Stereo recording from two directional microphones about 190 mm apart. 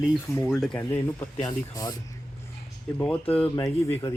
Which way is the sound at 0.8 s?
15° left (ahead or behind).